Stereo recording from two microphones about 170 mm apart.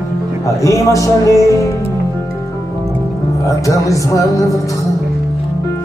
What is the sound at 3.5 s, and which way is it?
A man's voice, 20° left (ahead or behind).